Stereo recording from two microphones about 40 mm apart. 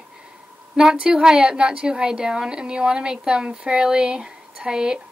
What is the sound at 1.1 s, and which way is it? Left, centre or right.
A woman's voice, centre.